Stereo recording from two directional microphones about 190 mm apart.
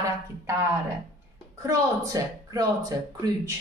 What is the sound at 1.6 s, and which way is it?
A woman's voice, 15° right (ahead or behind).